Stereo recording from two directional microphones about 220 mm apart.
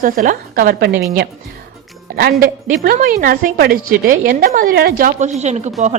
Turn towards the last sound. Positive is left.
turn(degrees=-30)  # may be behind; listen again after turning